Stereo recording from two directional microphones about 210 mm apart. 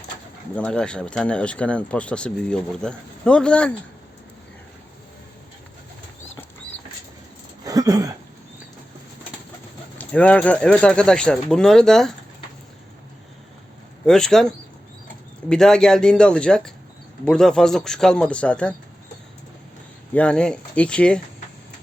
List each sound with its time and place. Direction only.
0.5 s speech: 5° left (ahead or behind)
7.6 s a sound: 15° right (ahead or behind)
10.0 s speech: 5° left (ahead or behind)
14.0 s speech: 5° left (ahead or behind)
20.1 s speech: 5° left (ahead or behind)